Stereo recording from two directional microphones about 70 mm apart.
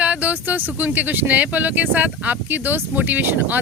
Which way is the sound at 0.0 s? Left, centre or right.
Right.